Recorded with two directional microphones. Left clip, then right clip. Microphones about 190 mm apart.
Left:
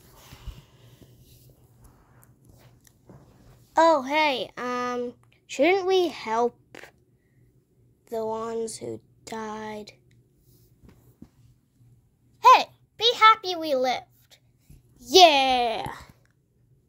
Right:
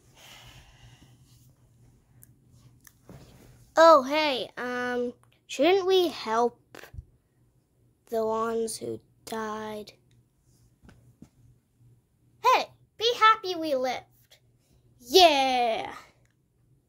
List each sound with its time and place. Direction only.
0.1 s snort: 15° right (ahead or behind)
3.7 s a child's voice: 10° right (ahead or behind)
4.1 s speech: centre (ahead or behind)
4.9 s speech: 10° right (ahead or behind)
8.0 s a woman's voice: 5° right (ahead or behind)
12.4 s a sound: 25° left (ahead or behind)
15.0 s a child's voice: 15° left (ahead or behind)